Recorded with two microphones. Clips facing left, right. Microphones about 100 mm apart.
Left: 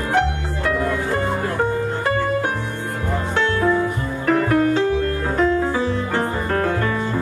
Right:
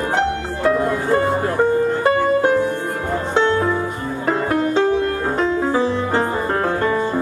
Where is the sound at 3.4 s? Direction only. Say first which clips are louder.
Right 1 dB; 20° right (ahead or behind).